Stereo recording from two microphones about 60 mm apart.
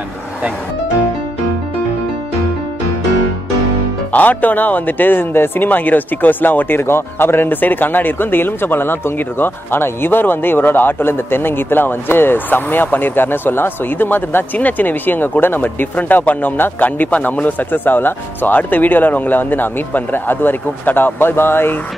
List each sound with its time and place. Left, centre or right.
4.1 s speech: left